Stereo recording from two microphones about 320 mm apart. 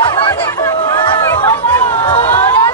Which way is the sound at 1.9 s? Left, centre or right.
Centre.